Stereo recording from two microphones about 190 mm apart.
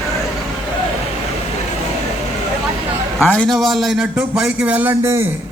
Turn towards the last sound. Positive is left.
turn(degrees=-15)  # may be behind; listen again after turning